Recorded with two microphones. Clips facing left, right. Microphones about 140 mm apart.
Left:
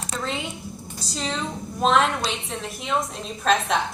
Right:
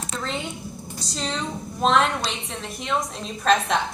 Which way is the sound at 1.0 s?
Centre (ahead or behind).